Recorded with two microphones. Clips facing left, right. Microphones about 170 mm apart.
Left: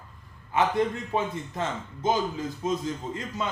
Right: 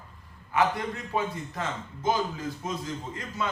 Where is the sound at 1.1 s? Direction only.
25° left (ahead or behind).